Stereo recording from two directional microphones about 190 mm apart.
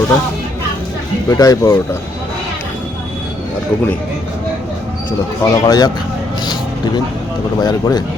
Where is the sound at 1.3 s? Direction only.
20° left (ahead or behind).